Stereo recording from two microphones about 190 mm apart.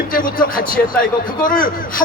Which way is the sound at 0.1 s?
45° left (ahead or behind).